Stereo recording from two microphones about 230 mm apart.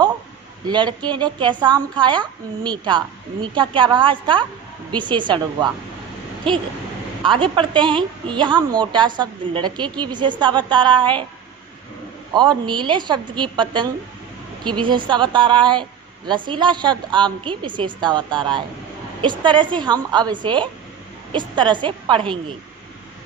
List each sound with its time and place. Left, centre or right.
0.7 s a woman's voice: centre
12.3 s a woman's voice: centre